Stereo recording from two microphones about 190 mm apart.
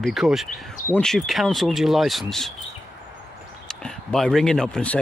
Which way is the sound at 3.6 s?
5° left (ahead or behind).